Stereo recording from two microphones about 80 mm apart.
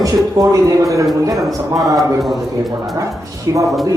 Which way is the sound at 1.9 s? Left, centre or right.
Centre.